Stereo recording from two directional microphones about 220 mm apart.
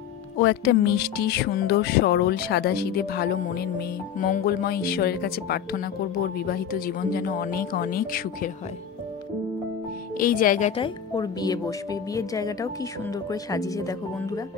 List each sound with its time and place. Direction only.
0.4 s speech: 50° left (ahead or behind)
10.1 s speech: 40° left (ahead or behind)
10.8 s speech: 20° left (ahead or behind)